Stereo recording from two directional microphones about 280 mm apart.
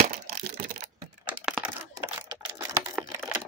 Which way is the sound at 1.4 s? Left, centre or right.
Centre.